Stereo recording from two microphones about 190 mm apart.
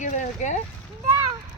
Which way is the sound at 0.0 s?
40° left (ahead or behind).